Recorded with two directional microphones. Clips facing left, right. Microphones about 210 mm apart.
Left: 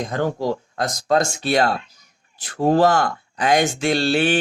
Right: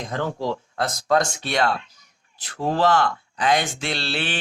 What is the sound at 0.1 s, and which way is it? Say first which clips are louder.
Speech: left 1 dB; 45° left (ahead or behind).